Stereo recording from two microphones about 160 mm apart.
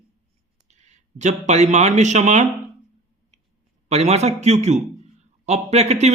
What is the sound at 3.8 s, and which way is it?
A man's voice, 40° right (ahead or behind).